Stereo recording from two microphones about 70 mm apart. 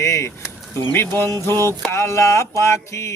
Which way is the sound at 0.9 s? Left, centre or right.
Left.